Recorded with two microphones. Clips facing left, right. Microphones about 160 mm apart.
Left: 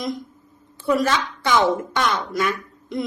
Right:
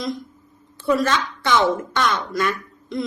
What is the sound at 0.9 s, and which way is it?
A woman's voice, 10° left (ahead or behind).